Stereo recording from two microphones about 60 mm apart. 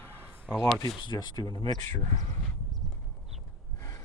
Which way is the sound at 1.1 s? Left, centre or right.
Left.